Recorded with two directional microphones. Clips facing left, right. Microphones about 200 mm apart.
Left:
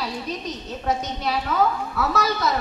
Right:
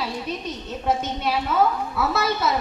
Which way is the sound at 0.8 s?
5° right (ahead or behind).